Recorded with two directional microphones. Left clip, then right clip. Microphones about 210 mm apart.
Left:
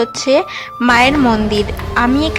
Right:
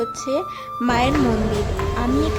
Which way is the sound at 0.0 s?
5° left (ahead or behind).